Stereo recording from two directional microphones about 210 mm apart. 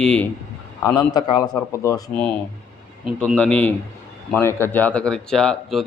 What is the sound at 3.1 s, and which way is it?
A man's voice, 5° left (ahead or behind).